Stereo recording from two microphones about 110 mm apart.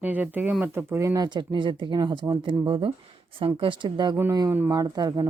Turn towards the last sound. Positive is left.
turn(degrees=-35)  # may be behind; listen again after turning